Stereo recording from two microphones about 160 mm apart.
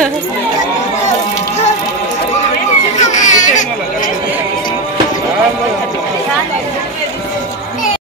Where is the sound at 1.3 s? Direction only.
45° left (ahead or behind).